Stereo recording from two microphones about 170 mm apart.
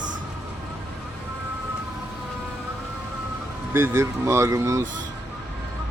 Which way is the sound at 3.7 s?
15° right (ahead or behind).